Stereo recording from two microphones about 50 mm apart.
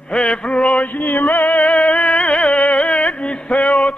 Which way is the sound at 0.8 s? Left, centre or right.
Left.